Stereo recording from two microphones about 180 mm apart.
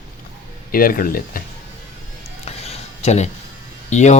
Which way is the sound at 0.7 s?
55° left (ahead or behind).